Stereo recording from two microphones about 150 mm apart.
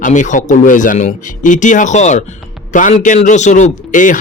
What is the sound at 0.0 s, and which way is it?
A man's voice, 55° left (ahead or behind).